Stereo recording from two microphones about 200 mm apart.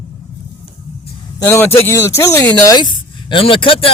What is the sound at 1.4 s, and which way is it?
Speech, 10° left (ahead or behind).